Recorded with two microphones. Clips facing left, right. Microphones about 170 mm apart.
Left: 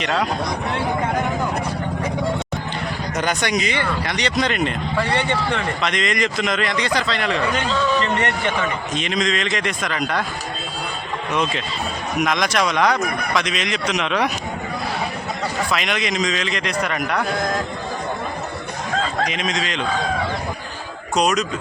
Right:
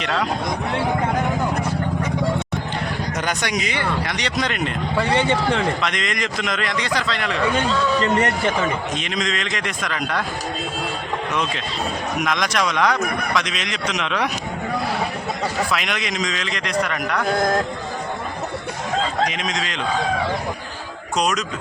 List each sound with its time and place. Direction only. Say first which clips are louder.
0.0 s speech: left 1 dB; 5° left (ahead or behind)
3.2 s speech: left 4 dB; centre (ahead or behind)
5.8 s speech: left 3 dB; centre (ahead or behind)
8.2 s speech: right 2 dB; 35° right (ahead or behind)
9.0 s speech: left 3 dB; centre (ahead or behind)
12.2 s speech: left 3 dB; 5° left (ahead or behind)
15.7 s speech: left 2 dB; centre (ahead or behind)
19.3 s speech: left 2 dB; centre (ahead or behind)
21.2 s speech: left 3 dB; 5° left (ahead or behind)